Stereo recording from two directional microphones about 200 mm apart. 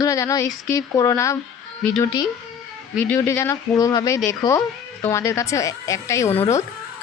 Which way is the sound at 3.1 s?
10° left (ahead or behind).